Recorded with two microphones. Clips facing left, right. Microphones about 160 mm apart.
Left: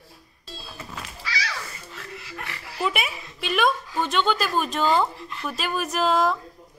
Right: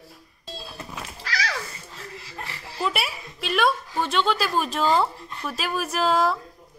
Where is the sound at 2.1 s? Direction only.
30° right (ahead or behind).